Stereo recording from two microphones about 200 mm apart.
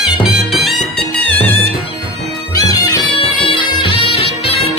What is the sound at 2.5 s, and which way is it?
Music, 20° left (ahead or behind).